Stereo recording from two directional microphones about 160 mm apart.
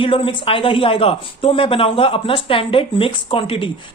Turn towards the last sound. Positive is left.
turn(degrees=35)  # may be behind; listen again after turning